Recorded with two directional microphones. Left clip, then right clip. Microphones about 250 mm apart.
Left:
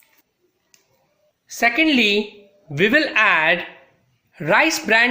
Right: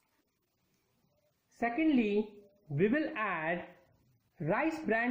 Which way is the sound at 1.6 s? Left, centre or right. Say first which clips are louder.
Left 15 dB; centre.